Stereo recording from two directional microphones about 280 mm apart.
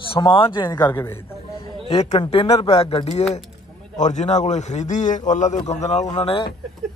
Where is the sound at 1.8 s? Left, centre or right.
Left.